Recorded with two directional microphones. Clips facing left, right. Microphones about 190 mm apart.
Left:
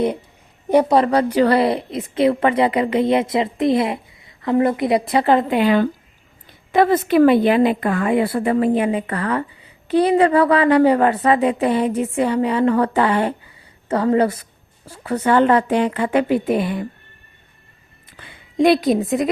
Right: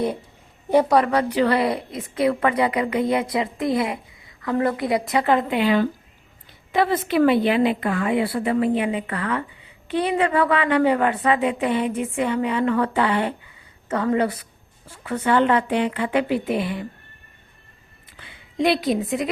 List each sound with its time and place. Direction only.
0.7 s a woman's voice: 15° left (ahead or behind)
0.9 s a woman's voice: 30° left (ahead or behind)
1.6 s a woman's voice: 25° left (ahead or behind)
5.5 s a woman's voice: 50° left (ahead or behind)
18.5 s a woman's voice: 45° left (ahead or behind)